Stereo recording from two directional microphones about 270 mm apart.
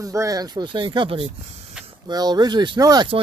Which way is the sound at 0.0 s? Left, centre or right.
Centre.